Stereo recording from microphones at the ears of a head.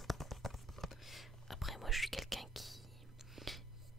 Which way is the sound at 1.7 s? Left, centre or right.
Centre.